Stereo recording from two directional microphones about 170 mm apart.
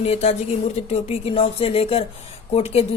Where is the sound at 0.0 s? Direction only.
40° left (ahead or behind).